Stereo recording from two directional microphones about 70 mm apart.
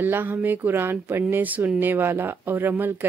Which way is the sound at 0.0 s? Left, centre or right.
Right.